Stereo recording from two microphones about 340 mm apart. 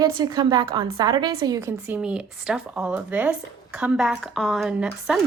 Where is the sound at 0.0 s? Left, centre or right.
Centre.